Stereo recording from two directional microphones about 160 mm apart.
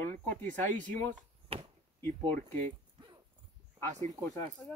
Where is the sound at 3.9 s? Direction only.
45° right (ahead or behind).